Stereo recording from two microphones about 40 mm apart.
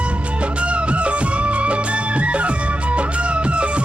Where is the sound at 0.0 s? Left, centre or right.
Right.